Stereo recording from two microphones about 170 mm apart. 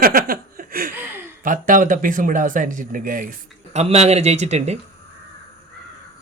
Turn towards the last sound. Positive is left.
turn(degrees=-40)  # may be behind; listen again after turning